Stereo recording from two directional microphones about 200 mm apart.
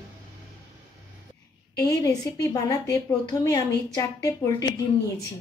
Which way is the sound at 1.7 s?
20° left (ahead or behind).